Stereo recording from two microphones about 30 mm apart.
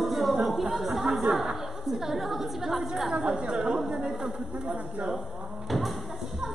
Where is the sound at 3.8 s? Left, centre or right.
Right.